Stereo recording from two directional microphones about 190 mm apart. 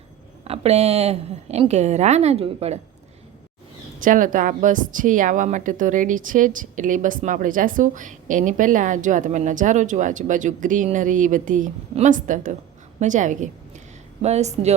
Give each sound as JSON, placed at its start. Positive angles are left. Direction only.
{"t": 0.4, "sound": "a woman's voice", "side_deg": -30}
{"t": 4.0, "sound": "a woman's voice", "side_deg": -45}